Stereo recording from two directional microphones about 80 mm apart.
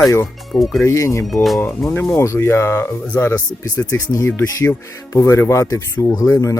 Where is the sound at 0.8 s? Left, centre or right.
Left.